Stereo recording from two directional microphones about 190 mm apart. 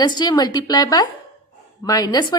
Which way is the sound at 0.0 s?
20° left (ahead or behind).